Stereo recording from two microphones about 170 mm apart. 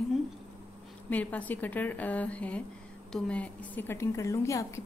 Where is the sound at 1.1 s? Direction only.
10° left (ahead or behind).